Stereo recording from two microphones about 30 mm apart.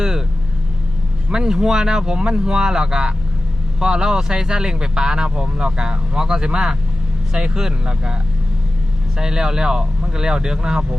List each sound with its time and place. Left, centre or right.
1.3 s speech: right
9.1 s speech: right